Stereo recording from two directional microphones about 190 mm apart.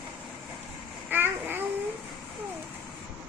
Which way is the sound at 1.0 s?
10° right (ahead or behind).